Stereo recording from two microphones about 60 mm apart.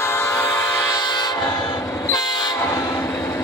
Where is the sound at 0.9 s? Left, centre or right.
Left.